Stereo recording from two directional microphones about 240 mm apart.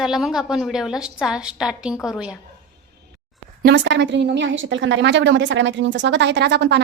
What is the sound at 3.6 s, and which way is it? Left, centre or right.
A woman's voice, right.